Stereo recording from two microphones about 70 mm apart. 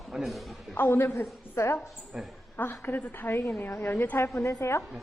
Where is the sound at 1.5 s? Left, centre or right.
Left.